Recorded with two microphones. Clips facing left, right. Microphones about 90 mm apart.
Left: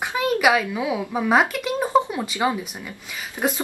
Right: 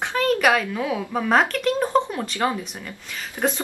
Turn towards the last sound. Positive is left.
turn(degrees=15)  # may be behind; listen again after turning